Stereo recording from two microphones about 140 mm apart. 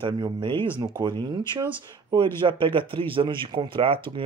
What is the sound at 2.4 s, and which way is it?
Speech, 40° right (ahead or behind).